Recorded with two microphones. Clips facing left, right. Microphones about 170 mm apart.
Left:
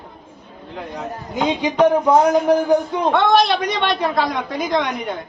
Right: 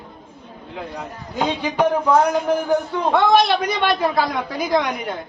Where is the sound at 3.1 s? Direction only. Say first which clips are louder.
Even; centre (ahead or behind).